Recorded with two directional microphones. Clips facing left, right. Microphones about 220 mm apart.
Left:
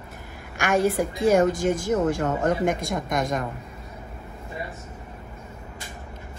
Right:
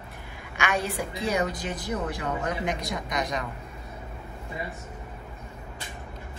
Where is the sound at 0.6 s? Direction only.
45° left (ahead or behind).